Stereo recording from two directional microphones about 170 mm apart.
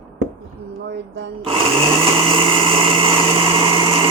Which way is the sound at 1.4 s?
30° right (ahead or behind).